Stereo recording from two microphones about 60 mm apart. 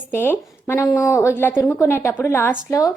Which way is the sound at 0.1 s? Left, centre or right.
Left.